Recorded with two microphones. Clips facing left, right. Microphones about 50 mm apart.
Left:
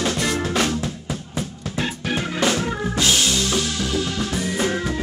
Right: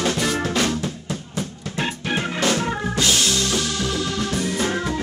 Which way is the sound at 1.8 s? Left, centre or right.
Centre.